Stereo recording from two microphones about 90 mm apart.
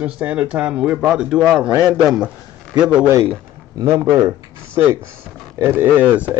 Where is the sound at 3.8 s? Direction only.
35° right (ahead or behind).